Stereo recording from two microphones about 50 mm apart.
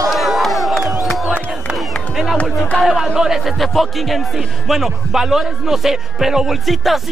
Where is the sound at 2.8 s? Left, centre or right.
Centre.